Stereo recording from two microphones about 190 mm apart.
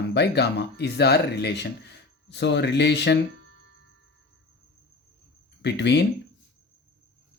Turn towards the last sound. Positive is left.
turn(degrees=65)  # may be behind; listen again after turning